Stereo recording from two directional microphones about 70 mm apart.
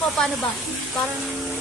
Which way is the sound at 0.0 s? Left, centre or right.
Centre.